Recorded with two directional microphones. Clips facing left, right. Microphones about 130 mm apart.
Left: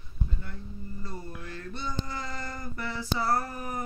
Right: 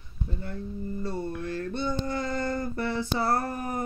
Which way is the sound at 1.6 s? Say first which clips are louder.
Right 5 dB; 55° right (ahead or behind).